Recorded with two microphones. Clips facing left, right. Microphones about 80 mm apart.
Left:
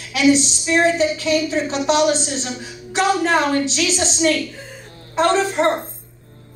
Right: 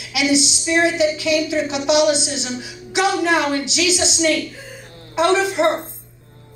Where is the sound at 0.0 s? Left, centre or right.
Left.